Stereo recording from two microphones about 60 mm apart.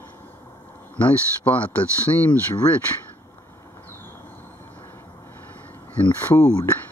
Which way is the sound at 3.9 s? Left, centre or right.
Left.